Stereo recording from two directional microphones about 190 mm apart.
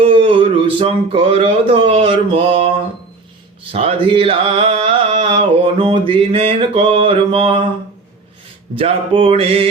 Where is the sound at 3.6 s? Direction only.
30° right (ahead or behind).